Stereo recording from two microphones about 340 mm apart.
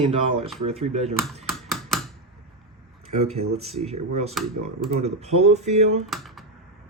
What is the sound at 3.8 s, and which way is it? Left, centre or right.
Speech, centre.